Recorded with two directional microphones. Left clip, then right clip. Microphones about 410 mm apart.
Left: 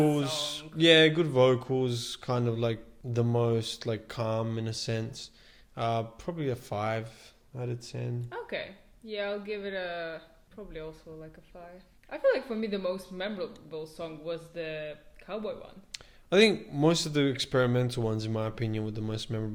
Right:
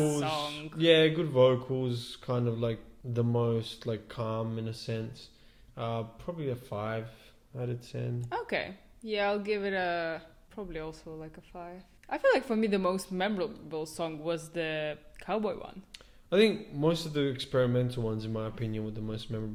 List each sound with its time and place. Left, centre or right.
0.0 s speech: centre
3.1 s speech: left
5.7 s speech: left
7.5 s speech: left
8.3 s speech: right
9.0 s speech: right
12.0 s speech: centre
13.1 s speech: left
14.3 s speech: centre
15.3 s speech: centre
16.3 s a man's voice: centre
16.8 s speech: centre; by 19.5 s right